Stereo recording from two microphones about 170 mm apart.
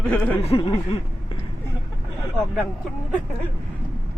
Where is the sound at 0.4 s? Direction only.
35° left (ahead or behind).